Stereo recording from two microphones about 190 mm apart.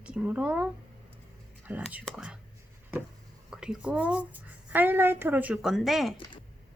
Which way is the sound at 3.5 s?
5° right (ahead or behind).